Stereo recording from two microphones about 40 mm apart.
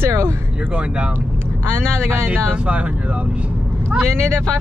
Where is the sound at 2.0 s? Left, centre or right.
Right.